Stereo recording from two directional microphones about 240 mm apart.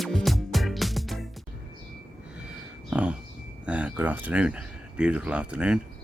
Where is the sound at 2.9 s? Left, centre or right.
Centre.